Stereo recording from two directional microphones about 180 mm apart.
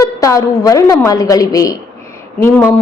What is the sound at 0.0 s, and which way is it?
A woman's voice, 20° left (ahead or behind).